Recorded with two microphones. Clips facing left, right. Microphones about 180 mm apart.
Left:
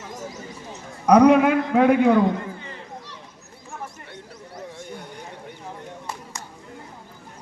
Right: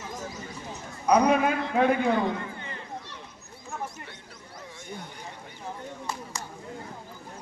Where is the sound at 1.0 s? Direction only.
75° left (ahead or behind).